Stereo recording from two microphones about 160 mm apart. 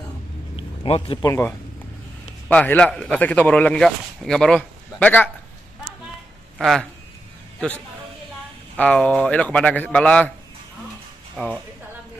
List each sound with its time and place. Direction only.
0.8 s speech: 35° left (ahead or behind)
1.2 s speech: 15° left (ahead or behind)
6.6 s speech: centre (ahead or behind)
8.7 s speech: 10° left (ahead or behind)
11.3 s speech: centre (ahead or behind)